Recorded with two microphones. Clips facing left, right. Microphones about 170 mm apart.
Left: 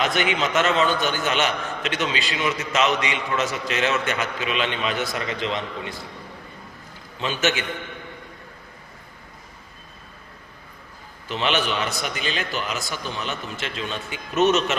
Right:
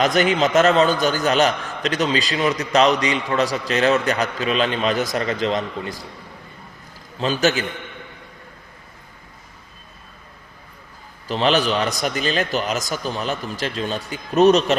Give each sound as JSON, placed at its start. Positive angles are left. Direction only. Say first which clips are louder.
{"t": 0.0, "sound": "a man's voice", "louder": "right 5 dB", "side_deg": -40}
{"t": 7.2, "sound": "a man's voice", "louder": "right 5 dB", "side_deg": -35}
{"t": 11.3, "sound": "a man's voice", "louder": "right 5 dB", "side_deg": -35}